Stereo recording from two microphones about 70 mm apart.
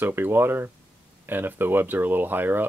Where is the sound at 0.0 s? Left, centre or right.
Right.